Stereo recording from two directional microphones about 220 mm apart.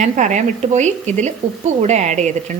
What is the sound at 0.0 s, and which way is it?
A woman's voice, 35° right (ahead or behind).